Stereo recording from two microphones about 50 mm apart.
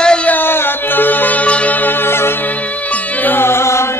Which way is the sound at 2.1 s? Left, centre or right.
Left.